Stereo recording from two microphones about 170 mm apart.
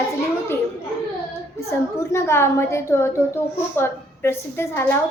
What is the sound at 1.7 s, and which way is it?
A child's voice, 15° left (ahead or behind).